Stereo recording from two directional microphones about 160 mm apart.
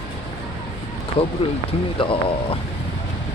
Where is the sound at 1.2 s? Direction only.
35° left (ahead or behind).